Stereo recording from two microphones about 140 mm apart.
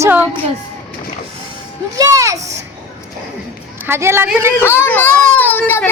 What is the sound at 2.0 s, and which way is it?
Speech, 25° right (ahead or behind).